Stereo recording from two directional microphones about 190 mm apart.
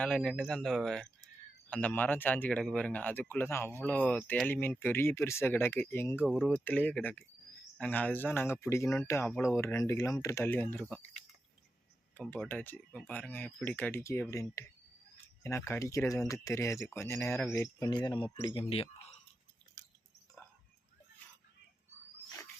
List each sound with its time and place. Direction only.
0.0 s speech: 5° left (ahead or behind)
6.2 s speech: centre (ahead or behind)
6.7 s speech: 10° left (ahead or behind)
12.1 s speech: 5° left (ahead or behind); by 19.1 s 30° left (ahead or behind)